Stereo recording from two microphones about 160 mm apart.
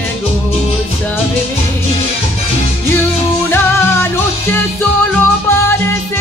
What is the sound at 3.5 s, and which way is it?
Music, 15° left (ahead or behind).